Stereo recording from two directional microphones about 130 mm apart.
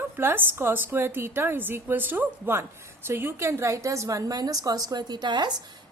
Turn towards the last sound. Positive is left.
turn(degrees=-35)  # may be behind; listen again after turning